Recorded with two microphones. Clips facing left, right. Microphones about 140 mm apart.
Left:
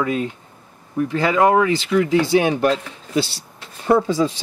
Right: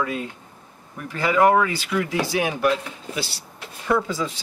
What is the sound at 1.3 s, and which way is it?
Speech, 20° left (ahead or behind).